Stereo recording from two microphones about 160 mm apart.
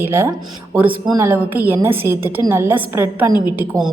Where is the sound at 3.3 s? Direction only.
25° left (ahead or behind).